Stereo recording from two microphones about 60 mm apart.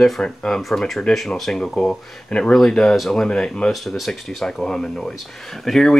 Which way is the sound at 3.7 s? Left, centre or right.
Centre.